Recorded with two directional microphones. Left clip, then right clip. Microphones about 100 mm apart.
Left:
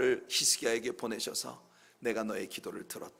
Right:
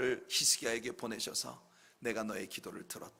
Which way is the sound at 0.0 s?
30° right (ahead or behind).